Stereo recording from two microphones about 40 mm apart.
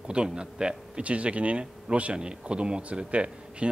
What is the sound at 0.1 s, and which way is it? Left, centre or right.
Speech, right.